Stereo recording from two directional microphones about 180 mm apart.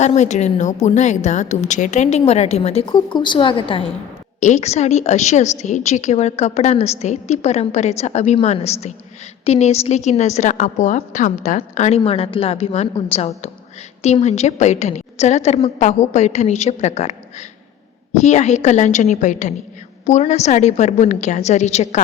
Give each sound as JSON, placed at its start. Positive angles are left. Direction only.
{"t": 0.0, "sound": "a woman's voice", "side_deg": 40}
{"t": 4.4, "sound": "a woman's voice", "side_deg": 40}